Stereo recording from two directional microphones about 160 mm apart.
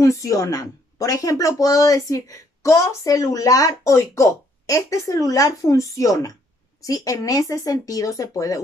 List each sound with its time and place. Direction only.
0.0 s a woman's voice: 20° left (ahead or behind)